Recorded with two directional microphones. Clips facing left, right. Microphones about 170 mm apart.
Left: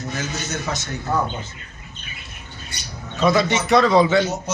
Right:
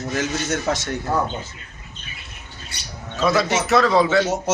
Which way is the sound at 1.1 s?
5° right (ahead or behind).